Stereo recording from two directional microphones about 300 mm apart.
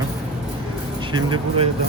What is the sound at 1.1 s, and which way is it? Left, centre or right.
Speech, centre.